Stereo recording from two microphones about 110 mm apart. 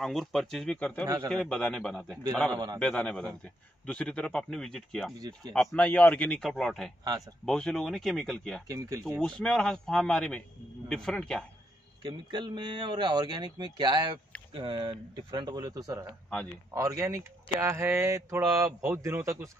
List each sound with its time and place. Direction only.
0.0 s speech: centre (ahead or behind)
1.0 s speech: 35° right (ahead or behind)
1.3 s a man's voice: 5° left (ahead or behind)
8.6 s speech: 30° right (ahead or behind)
9.2 s a man's voice: 5° left (ahead or behind)
12.0 s speech: 45° right (ahead or behind); by 19.5 s 25° right (ahead or behind)